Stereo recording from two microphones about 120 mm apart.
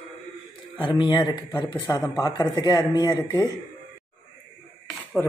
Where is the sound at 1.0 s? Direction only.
45° left (ahead or behind).